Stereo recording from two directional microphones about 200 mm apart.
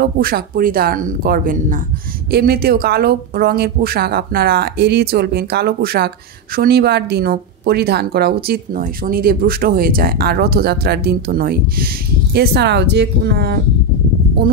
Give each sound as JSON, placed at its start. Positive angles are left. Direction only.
{"t": 0.0, "sound": "speech", "side_deg": -50}